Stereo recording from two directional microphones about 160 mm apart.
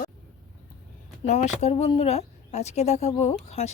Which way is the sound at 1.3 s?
45° left (ahead or behind).